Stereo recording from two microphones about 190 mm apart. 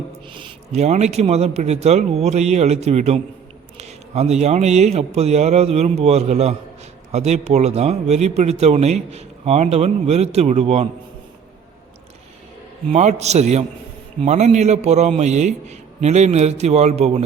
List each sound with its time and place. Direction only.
0.3 s speech: 30° right (ahead or behind)
12.9 s speech: 35° right (ahead or behind)